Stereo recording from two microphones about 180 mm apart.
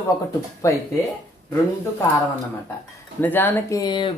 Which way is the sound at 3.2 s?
10° left (ahead or behind).